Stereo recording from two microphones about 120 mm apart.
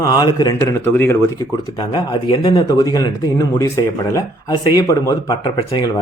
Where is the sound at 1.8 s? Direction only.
40° left (ahead or behind).